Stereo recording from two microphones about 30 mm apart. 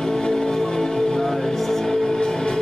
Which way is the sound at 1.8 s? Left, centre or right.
Left.